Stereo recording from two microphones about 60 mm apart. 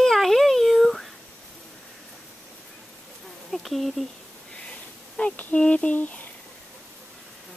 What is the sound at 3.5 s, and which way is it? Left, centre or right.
Speech, centre.